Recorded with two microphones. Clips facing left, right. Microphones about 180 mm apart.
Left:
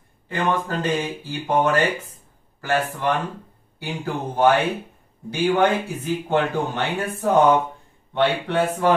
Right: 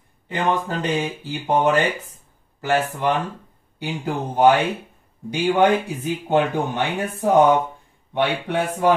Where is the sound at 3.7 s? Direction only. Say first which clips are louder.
Right 2 dB; 20° right (ahead or behind).